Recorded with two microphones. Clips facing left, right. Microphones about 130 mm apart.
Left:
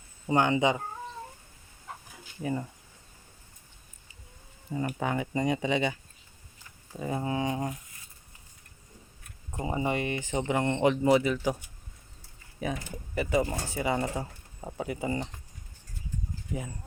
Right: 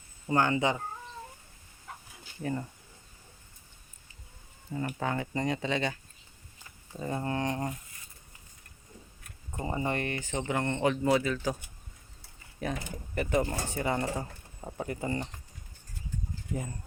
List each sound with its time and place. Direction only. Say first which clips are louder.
0.3 s speech: left 2 dB; 20° left (ahead or behind)
2.4 s speech: left 2 dB; 10° left (ahead or behind)
4.9 s speech: left 2 dB; 15° left (ahead or behind)
9.5 s speech: left 2 dB; 5° left (ahead or behind)
12.6 s speech: left 1 dB; 5° left (ahead or behind)